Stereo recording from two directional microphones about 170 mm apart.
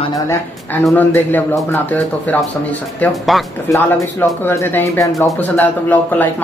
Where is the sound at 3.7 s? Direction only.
15° left (ahead or behind).